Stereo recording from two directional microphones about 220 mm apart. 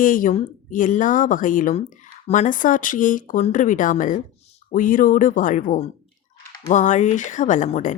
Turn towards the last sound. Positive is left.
turn(degrees=35)  # may be behind; listen again after turning